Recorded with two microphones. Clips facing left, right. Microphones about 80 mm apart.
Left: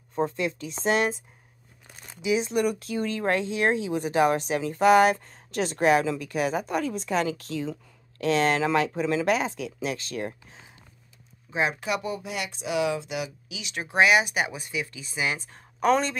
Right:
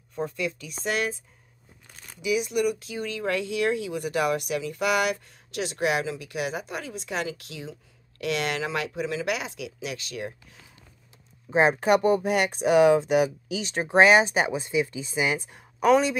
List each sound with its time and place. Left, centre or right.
0.1 s speech: left
2.2 s speech: left
11.5 s speech: right; by 15.6 s centre
15.8 s speech: centre